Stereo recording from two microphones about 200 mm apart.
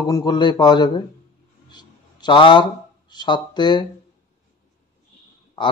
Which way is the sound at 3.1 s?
20° left (ahead or behind).